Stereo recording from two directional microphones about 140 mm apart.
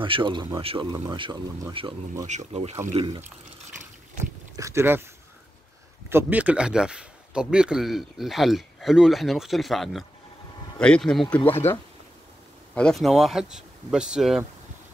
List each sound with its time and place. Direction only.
0.0 s speech: 35° right (ahead or behind)
2.2 s speech: 55° right (ahead or behind)
2.9 s speech: 40° right (ahead or behind)
4.6 s speech: 20° right (ahead or behind)
6.0 s speech: 15° right (ahead or behind); by 11.3 s 5° left (ahead or behind)
11.4 s speech: 15° left (ahead or behind)
12.7 s speech: 5° left (ahead or behind)